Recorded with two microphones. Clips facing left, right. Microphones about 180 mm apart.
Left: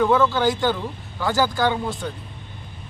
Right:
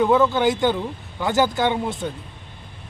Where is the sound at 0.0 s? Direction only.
20° right (ahead or behind).